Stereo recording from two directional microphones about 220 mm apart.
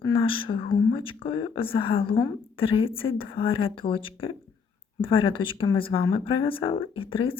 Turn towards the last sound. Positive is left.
turn(degrees=25)  # may be behind; listen again after turning